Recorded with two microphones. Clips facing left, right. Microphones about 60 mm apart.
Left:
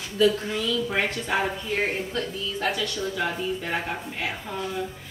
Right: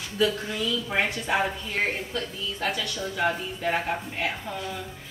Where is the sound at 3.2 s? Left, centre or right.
Centre.